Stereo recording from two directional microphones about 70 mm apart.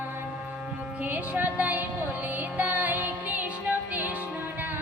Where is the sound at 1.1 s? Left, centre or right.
Right.